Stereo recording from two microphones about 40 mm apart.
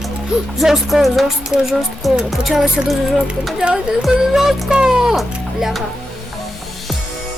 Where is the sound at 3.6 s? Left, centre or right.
Right.